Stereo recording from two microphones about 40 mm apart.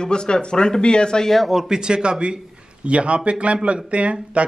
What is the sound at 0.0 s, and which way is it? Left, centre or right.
Speech, left.